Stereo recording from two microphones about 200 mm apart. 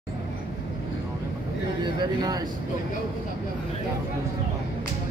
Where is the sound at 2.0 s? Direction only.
20° right (ahead or behind).